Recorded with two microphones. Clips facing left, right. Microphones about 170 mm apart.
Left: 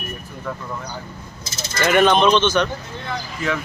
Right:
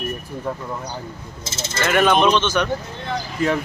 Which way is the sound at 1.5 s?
25° right (ahead or behind).